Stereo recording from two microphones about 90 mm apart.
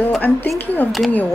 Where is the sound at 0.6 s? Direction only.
20° left (ahead or behind).